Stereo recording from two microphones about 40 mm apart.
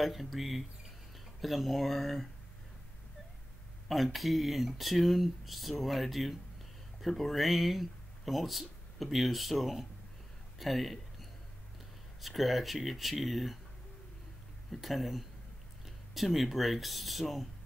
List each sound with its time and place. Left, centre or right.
0.0 s speech: centre
3.9 s speech: centre
14.7 s speech: centre